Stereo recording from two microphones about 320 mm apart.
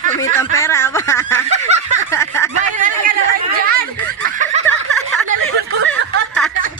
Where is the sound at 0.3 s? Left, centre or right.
Centre.